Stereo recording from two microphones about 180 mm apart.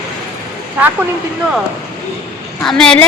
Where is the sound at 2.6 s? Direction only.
5° left (ahead or behind).